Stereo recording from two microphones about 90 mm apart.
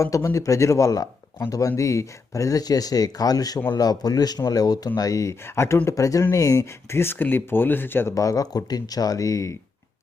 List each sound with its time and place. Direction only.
0.0 s a man's voice: 35° left (ahead or behind)
8.1 s a man's voice: 40° left (ahead or behind)